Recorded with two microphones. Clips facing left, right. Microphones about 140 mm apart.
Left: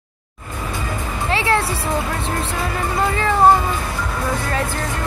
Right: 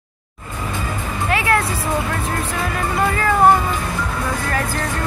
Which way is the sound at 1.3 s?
30° left (ahead or behind).